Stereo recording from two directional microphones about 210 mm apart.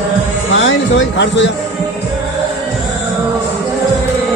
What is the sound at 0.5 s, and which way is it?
Speech, 60° left (ahead or behind).